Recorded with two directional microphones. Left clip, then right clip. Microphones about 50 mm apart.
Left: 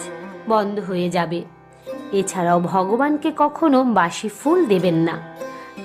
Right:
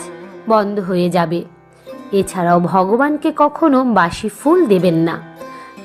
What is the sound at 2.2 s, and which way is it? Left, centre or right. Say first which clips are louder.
Speech: right 4 dB; right.